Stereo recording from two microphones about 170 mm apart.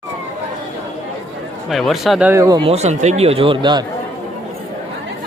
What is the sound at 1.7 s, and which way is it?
Speech, centre (ahead or behind).